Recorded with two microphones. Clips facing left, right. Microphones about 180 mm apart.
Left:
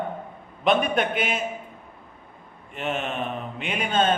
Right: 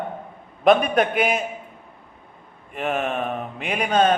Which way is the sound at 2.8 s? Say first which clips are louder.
Right 4 dB; 55° right (ahead or behind).